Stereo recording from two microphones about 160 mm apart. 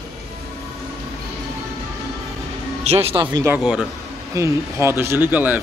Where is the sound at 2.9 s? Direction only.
40° right (ahead or behind).